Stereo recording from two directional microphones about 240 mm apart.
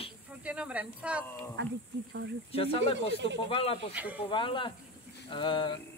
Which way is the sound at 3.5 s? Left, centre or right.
Left.